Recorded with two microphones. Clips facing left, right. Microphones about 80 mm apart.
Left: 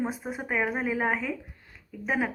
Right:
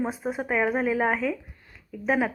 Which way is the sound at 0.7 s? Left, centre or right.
Centre.